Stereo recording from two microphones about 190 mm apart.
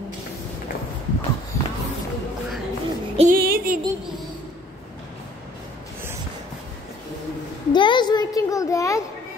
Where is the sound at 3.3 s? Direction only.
50° right (ahead or behind).